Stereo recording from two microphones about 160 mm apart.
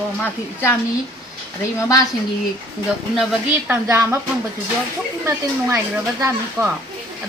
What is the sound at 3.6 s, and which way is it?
Speech, 15° right (ahead or behind).